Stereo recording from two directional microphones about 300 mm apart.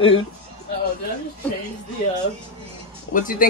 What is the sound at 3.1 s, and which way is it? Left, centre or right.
Speech, left.